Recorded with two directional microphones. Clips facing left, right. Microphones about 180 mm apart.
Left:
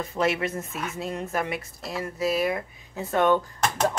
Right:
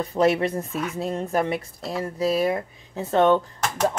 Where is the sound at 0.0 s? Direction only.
35° right (ahead or behind).